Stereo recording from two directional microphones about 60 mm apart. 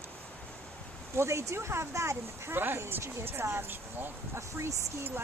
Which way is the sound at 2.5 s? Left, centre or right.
Right.